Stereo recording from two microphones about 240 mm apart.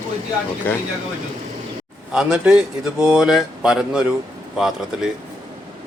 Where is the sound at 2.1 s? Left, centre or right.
Centre.